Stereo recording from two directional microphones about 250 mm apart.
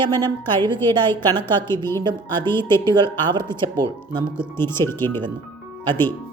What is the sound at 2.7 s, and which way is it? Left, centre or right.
Speech, centre.